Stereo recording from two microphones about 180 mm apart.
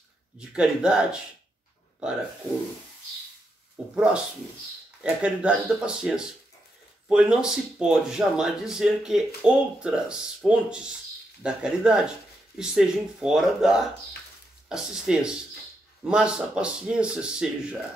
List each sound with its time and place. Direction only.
0.4 s speech: 5° right (ahead or behind)
3.7 s speech: 5° right (ahead or behind)